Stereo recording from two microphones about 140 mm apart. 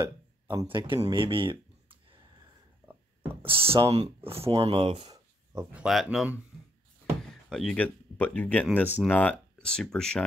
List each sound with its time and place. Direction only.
0.0 s speech: 35° right (ahead or behind)
0.9 s speech: 25° right (ahead or behind)
1.2 s a sound: 40° right (ahead or behind)
3.2 s speech: 40° right (ahead or behind)
5.1 s a sound: 25° right (ahead or behind)
5.7 s speech: 5° right (ahead or behind)
7.2 s speech: 5° left (ahead or behind)